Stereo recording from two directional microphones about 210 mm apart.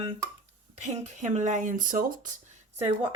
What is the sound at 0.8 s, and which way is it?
Speech, 35° right (ahead or behind).